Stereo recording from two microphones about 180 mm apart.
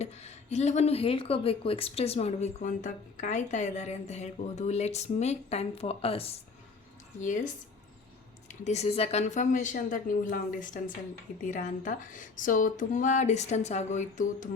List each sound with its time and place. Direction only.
0.0 s speech: 35° left (ahead or behind)
7.2 s a woman's voice: 45° left (ahead or behind)
8.6 s a woman's voice: 35° left (ahead or behind)